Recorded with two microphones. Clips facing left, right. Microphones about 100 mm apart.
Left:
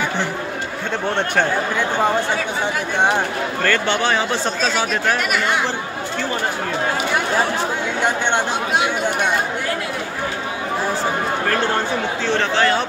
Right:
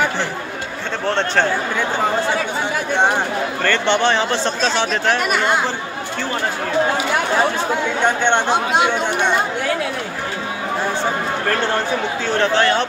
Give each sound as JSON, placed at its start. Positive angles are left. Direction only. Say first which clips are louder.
{"t": 1.1, "sound": "a man's voice", "louder": "right 2 dB", "side_deg": 15}
{"t": 3.6, "sound": "speech", "louder": "right 2 dB", "side_deg": 5}
{"t": 12.4, "sound": "speech", "louder": "right 3 dB", "side_deg": 0}